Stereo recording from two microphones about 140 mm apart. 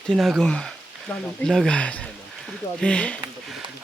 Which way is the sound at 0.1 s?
5° left (ahead or behind).